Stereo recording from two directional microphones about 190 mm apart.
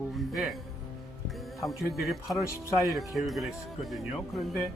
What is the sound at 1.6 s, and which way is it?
Speech, centre (ahead or behind).